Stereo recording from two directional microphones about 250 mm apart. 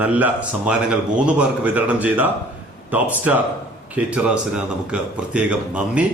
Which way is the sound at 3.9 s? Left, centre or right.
Centre.